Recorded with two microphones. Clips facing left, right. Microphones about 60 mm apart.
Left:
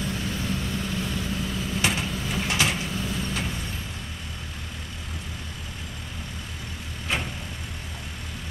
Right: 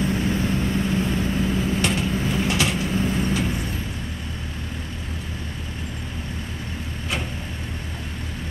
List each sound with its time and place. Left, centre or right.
0.0 s vehicle: right
1.8 s vehicle: centre
2.1 s vehicle: right
2.4 s vehicle: centre
2.9 s vehicle: right